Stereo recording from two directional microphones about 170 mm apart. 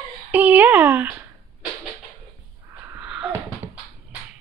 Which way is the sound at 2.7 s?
10° right (ahead or behind).